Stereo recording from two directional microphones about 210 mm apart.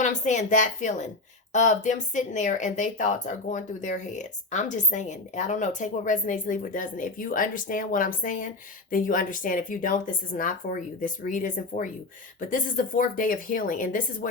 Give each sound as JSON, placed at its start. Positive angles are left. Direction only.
{"t": 0.0, "sound": "speech", "side_deg": 35}